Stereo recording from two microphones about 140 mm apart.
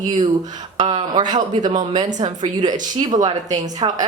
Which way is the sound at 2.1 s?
60° right (ahead or behind).